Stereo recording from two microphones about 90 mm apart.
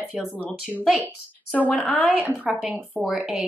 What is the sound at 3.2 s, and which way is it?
Speech, 5° right (ahead or behind).